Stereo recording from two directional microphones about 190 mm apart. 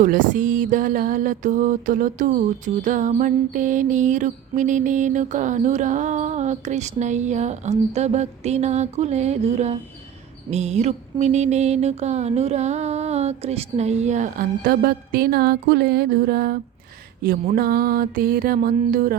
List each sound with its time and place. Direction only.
0.0 s mantra: 45° right (ahead or behind)